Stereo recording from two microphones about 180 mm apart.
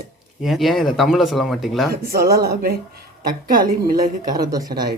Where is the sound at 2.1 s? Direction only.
60° right (ahead or behind).